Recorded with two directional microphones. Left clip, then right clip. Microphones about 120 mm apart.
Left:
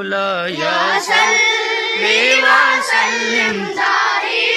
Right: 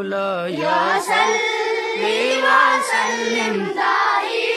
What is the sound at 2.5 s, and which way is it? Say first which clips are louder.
Music: left 3 dB; 35° right (ahead or behind).